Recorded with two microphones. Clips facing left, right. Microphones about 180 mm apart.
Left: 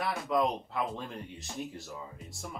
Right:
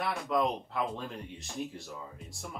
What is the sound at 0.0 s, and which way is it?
Speech, centre (ahead or behind).